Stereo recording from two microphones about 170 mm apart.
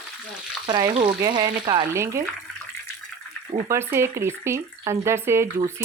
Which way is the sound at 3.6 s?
15° right (ahead or behind).